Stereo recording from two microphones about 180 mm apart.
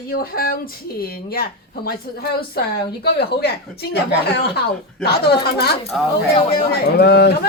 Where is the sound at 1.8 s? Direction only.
60° left (ahead or behind).